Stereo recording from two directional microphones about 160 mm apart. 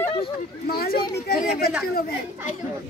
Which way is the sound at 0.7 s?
70° left (ahead or behind).